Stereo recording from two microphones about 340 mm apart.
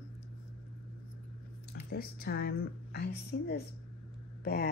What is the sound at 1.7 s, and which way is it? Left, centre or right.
Speech, left.